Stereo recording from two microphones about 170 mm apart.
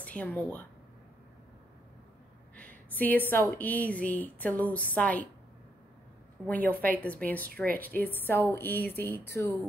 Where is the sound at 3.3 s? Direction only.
10° left (ahead or behind).